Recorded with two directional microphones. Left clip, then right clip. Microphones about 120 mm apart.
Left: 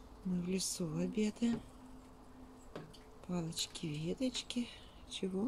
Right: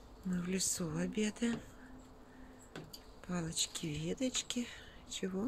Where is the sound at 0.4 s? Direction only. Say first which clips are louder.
Right 2 dB; 20° left (ahead or behind).